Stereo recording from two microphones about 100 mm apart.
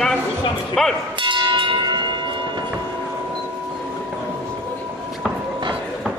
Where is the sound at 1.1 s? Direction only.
55° right (ahead or behind).